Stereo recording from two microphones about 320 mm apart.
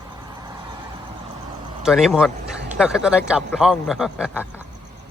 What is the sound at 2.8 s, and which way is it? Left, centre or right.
A man's voice, centre.